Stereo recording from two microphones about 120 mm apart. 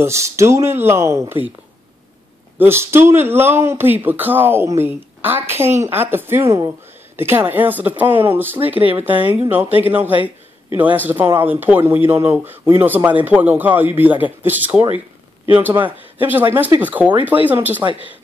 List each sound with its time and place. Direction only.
0.0 s speech: 25° right (ahead or behind)
2.6 s speech: 20° right (ahead or behind)